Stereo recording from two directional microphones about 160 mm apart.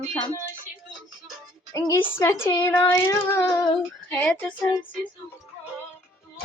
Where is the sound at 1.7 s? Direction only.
15° left (ahead or behind).